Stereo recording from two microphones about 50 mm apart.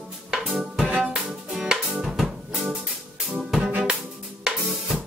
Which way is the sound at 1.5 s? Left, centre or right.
Centre.